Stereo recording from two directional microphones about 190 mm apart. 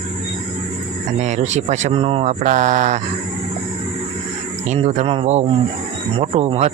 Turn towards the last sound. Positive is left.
turn(degrees=-35)  # may be behind; listen again after turning